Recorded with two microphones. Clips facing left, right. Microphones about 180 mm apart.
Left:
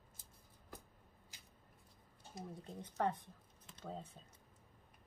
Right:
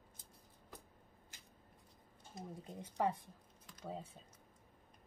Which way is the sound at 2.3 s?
5° right (ahead or behind).